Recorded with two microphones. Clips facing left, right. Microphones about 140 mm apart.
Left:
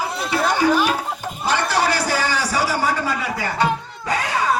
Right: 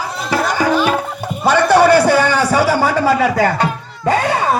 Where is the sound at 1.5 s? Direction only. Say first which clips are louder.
Right 12 dB; 60° right (ahead or behind); by 3.5 s 90° right.